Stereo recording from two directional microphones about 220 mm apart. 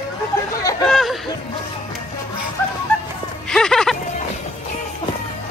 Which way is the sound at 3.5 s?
5° left (ahead or behind).